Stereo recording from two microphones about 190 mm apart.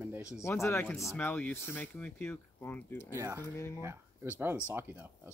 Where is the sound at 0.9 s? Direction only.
Centre (ahead or behind).